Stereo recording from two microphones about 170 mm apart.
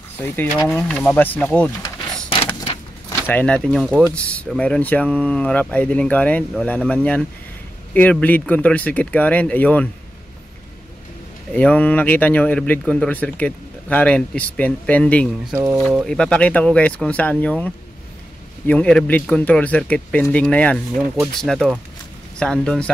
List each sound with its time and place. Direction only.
0.7 s speech: 5° left (ahead or behind)
1.8 s a sound: 30° left (ahead or behind)
3.3 s speech: 10° left (ahead or behind)
11.5 s speech: 10° left (ahead or behind)
15.5 s speech: 15° right (ahead or behind)
15.8 s speech: centre (ahead or behind)